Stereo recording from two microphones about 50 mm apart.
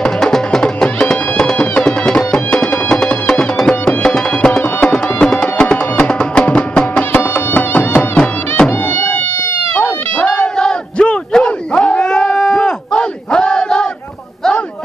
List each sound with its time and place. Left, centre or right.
0.0 s music: centre
7.2 s music: left
9.8 s a sound: left
10.3 s battle cry: centre